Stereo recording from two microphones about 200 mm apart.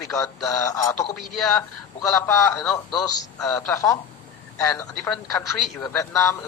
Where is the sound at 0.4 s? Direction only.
15° left (ahead or behind).